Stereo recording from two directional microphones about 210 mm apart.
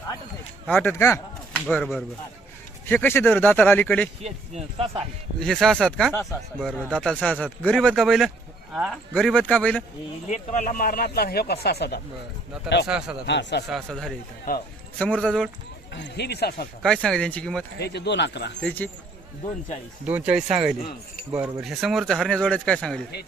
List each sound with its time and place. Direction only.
0.7 s speech: 10° left (ahead or behind)
1.6 s speech: centre (ahead or behind)
4.2 s speech: 30° right (ahead or behind)
5.4 s speech: centre (ahead or behind)
10.2 s speech: 35° left (ahead or behind); by 13.7 s 55° left (ahead or behind)
13.7 s speech: centre (ahead or behind)
14.5 s speech: 40° left (ahead or behind)
14.9 s speech: 5° left (ahead or behind)
15.9 s speech: 55° left (ahead or behind)
16.8 s speech: 5° left (ahead or behind)
17.7 s speech: 50° left (ahead or behind)
18.6 s speech: 10° left (ahead or behind)
20.1 s speech: 5° right (ahead or behind)